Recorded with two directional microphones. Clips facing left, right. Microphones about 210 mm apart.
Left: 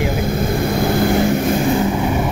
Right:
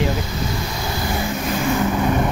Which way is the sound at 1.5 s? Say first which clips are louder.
Left 4 dB; 30° left (ahead or behind).